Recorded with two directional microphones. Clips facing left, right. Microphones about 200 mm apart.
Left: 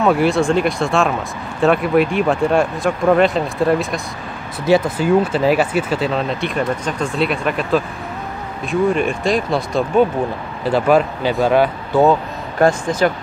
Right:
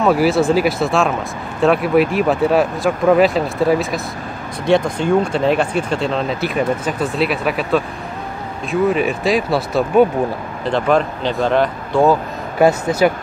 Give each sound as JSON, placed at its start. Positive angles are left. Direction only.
{"t": 0.0, "sound": "speech", "side_deg": 0}
{"t": 10.6, "sound": "speech", "side_deg": 5}